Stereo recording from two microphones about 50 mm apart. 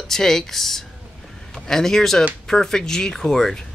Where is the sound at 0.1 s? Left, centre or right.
Centre.